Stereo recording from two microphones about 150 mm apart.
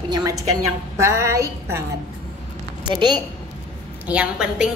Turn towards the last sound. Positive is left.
turn(degrees=-5)  # may be behind; listen again after turning